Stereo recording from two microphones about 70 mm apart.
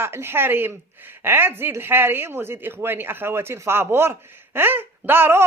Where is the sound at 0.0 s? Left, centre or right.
Right.